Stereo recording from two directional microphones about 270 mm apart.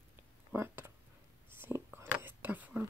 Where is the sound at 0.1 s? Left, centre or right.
Centre.